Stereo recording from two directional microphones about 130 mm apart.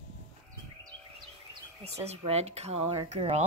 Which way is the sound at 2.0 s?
55° right (ahead or behind).